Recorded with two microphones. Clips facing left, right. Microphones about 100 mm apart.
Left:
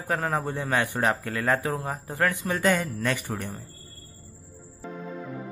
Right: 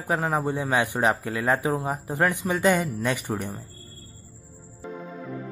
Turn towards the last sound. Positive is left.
turn(degrees=-15)  # may be behind; listen again after turning